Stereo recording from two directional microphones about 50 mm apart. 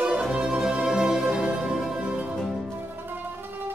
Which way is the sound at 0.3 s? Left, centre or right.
Centre.